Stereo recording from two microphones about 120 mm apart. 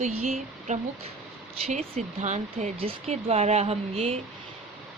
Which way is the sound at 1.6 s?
60° right (ahead or behind).